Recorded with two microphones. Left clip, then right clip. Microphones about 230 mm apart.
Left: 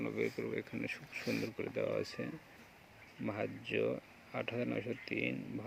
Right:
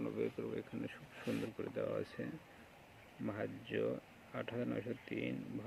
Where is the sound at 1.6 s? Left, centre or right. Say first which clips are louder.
Left 4 dB; centre.